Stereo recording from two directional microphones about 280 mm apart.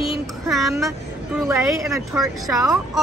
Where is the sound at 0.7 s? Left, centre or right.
Centre.